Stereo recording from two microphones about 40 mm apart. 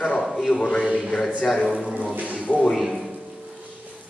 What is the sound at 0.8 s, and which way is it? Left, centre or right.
Speech, right.